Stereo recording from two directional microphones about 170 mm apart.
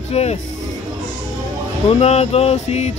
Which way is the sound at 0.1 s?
40° left (ahead or behind).